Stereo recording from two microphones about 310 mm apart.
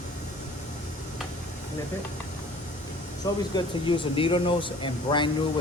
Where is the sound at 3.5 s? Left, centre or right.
Centre.